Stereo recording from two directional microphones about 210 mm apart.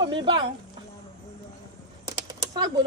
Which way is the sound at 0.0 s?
25° right (ahead or behind).